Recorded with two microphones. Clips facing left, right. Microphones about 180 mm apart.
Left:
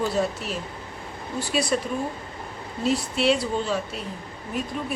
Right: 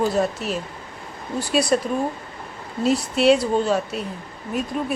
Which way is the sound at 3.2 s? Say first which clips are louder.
Right 8 dB; 45° right (ahead or behind).